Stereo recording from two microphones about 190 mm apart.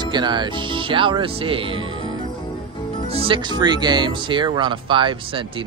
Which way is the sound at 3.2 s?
25° right (ahead or behind).